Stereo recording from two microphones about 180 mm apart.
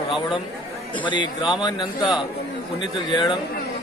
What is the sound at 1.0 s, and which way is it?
Speech, 25° left (ahead or behind).